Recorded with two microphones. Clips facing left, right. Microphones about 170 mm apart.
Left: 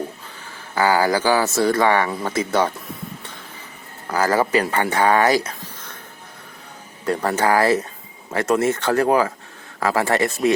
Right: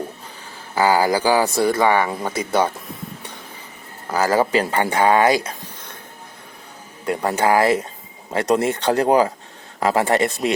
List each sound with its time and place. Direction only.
0.8 s speech: 15° right (ahead or behind)
4.0 s speech: 10° right (ahead or behind); by 5.5 s 25° right (ahead or behind)
7.0 s speech: 15° right (ahead or behind)